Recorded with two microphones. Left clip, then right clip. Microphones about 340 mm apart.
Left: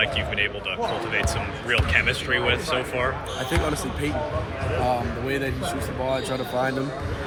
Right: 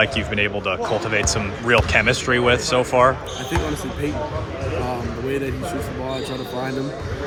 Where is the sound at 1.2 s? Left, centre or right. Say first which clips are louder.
Right 5 dB; centre.